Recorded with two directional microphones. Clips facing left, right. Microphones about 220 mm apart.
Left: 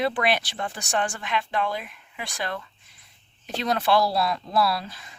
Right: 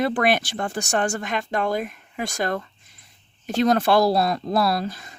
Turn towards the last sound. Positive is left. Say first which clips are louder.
# right 3 dB
turn(degrees=-45)  # may be behind; listen again after turning